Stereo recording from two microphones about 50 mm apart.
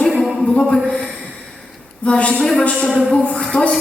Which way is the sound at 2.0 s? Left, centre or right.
Left.